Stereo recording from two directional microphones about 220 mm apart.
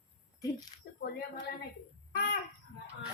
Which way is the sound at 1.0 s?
45° left (ahead or behind).